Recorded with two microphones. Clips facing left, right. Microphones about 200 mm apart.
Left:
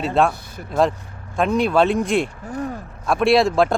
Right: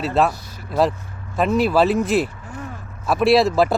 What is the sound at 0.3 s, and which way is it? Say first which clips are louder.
Vehicle: left 1 dB; 55° left (ahead or behind).